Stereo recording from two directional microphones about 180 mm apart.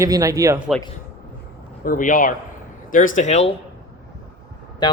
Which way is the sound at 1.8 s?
50° left (ahead or behind).